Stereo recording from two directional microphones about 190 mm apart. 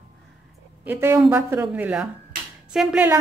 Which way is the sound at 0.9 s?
10° right (ahead or behind).